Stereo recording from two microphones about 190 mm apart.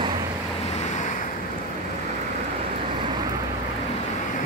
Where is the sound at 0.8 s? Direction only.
40° left (ahead or behind).